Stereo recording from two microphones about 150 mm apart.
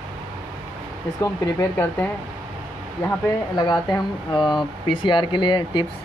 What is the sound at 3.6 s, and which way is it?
Speech, 30° left (ahead or behind).